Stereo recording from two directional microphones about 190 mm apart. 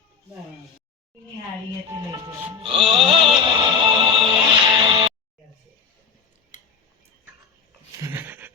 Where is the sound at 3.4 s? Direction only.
25° right (ahead or behind).